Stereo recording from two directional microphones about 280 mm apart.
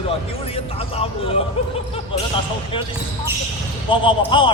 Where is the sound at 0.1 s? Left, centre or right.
Left.